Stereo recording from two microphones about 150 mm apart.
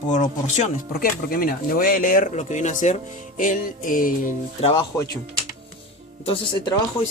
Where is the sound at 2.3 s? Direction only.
50° left (ahead or behind).